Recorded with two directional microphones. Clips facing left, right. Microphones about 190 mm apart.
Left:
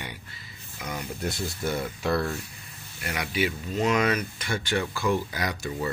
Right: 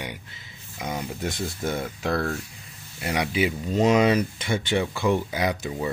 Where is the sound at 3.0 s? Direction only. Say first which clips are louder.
Right 4 dB; 25° right (ahead or behind).